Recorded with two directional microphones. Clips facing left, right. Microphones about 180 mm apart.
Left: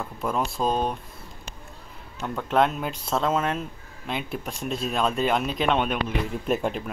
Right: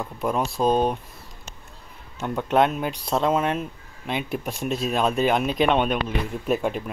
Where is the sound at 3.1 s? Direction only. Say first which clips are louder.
Right 2 dB; 15° right (ahead or behind).